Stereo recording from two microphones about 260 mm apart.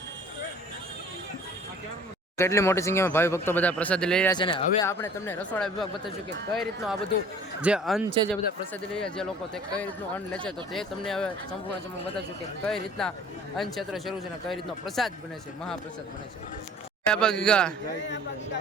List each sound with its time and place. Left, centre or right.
2.4 s speech: centre
4.3 s speech: centre
8.0 s speech: centre
8.3 s speech: centre
10.3 s speech: centre
12.6 s speech: centre
17.1 s speech: centre